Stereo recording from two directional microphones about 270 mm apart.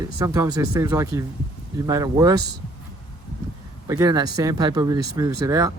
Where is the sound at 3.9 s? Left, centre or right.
Centre.